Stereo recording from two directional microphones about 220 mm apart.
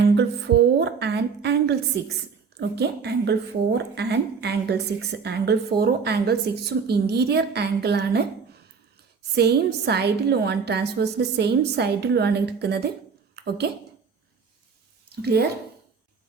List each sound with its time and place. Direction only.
0.0 s music: 50° right (ahead or behind)
2.6 s a woman's voice: 50° right (ahead or behind)
9.3 s a woman's voice: 50° right (ahead or behind)
13.3 s a sound: 50° right (ahead or behind)
15.2 s a woman's voice: 45° right (ahead or behind)